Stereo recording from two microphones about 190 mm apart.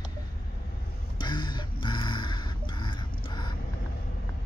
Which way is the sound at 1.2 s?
25° left (ahead or behind).